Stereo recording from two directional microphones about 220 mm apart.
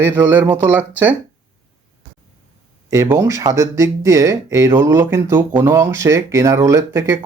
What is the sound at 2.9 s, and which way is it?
Speech, 10° right (ahead or behind).